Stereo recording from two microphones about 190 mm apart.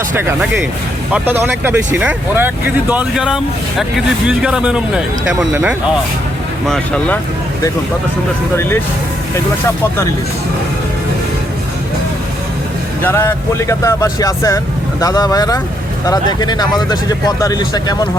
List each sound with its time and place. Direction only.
1.1 s speech: 10° right (ahead or behind); by 7.2 s 5° left (ahead or behind)
13.0 s speech: 10° left (ahead or behind)